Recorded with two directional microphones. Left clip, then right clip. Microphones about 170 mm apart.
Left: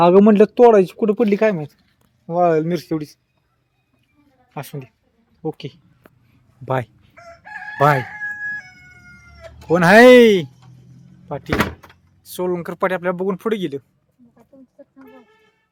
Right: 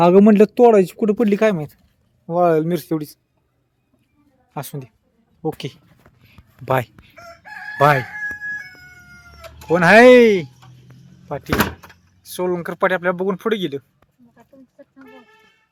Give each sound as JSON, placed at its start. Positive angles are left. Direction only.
{"t": 0.0, "sound": "speech", "side_deg": -20}
{"t": 2.2, "sound": "a man's voice", "side_deg": -10}
{"t": 4.5, "sound": "a man's voice", "side_deg": -10}
{"t": 6.2, "sound": "a sound", "side_deg": 0}
{"t": 7.3, "sound": "chicken", "side_deg": -60}
{"t": 7.8, "sound": "speech", "side_deg": 15}
{"t": 9.6, "sound": "speech", "side_deg": 20}
{"t": 11.5, "sound": "door", "side_deg": -35}
{"t": 12.2, "sound": "speech", "side_deg": 5}